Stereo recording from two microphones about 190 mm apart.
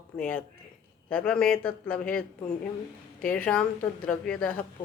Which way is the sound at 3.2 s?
5° left (ahead or behind).